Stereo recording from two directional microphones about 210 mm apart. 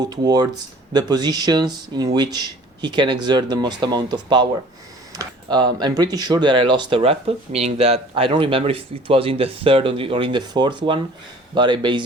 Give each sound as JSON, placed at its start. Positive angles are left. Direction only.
{"t": 0.0, "sound": "speech", "side_deg": -20}